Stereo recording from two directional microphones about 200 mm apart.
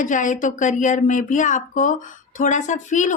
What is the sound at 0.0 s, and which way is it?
Speech, 40° left (ahead or behind).